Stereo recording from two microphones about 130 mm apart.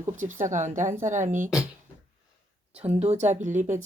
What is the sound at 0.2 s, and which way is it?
Speech, 80° right.